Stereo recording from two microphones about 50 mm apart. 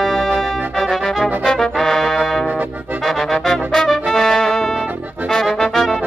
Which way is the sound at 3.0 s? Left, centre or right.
Centre.